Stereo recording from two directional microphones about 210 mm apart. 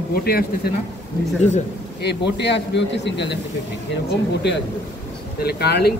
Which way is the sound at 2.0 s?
55° left (ahead or behind).